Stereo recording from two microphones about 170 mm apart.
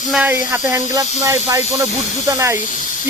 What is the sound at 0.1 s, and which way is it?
Speech, 10° right (ahead or behind).